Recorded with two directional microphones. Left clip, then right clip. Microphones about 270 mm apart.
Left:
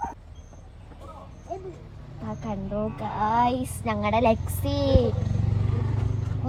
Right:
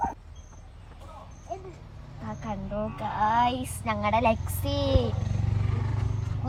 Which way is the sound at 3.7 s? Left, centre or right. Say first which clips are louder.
Left 1 dB; right.